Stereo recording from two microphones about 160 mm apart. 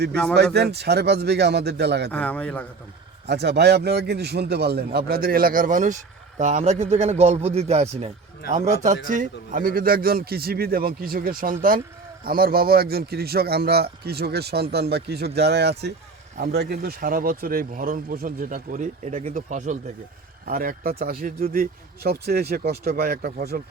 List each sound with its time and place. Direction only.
0.1 s a man's voice: 5° left (ahead or behind)
0.5 s a man's voice: 90° right
2.0 s a man's voice: 10° left (ahead or behind)
3.2 s a man's voice: 90° right; by 19.8 s 50° right (ahead or behind)
20.4 s speech: 65° right (ahead or behind)